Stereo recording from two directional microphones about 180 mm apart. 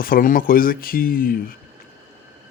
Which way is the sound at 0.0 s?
50° left (ahead or behind).